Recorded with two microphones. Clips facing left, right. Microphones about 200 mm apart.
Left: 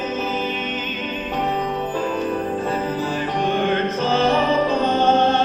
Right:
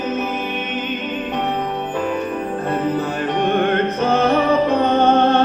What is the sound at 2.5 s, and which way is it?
Music, 60° right (ahead or behind).